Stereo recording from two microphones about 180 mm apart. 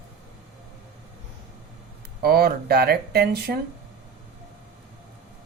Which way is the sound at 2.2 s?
60° right (ahead or behind).